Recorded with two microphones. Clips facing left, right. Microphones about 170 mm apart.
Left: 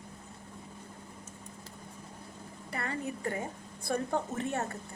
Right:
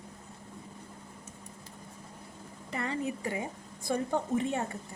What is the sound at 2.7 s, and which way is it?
A woman's voice, 20° right (ahead or behind).